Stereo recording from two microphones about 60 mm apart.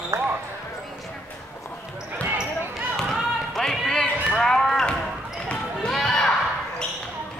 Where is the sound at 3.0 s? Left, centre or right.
Centre.